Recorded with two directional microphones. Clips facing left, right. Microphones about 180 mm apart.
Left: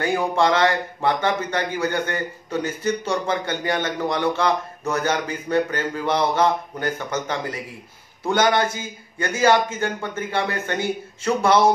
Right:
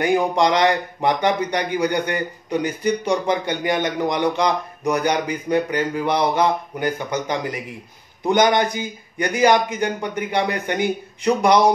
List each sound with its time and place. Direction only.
0.0 s speech: 15° right (ahead or behind)